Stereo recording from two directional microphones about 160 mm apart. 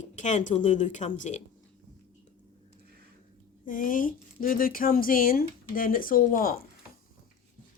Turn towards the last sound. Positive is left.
turn(degrees=60)  # may be behind; listen again after turning